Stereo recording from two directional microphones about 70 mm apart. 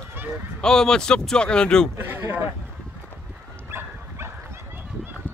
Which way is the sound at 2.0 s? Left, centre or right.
Right.